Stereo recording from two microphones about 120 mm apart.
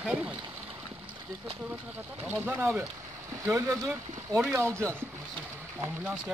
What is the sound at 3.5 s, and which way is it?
Speech, 25° right (ahead or behind).